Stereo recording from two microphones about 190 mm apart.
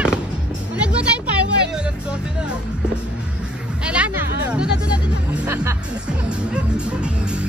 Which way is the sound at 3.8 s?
5° right (ahead or behind).